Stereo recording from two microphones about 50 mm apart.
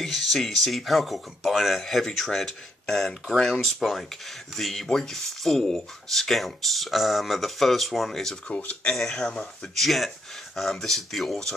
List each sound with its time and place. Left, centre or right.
0.0 s speech: centre
8.5 s speech: left
8.9 s speech: centre
9.8 s speech: centre